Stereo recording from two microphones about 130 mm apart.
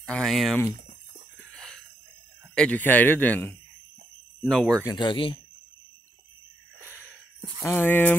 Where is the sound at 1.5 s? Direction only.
5° left (ahead or behind).